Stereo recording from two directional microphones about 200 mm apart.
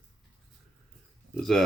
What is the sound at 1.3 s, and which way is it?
Speech, centre (ahead or behind).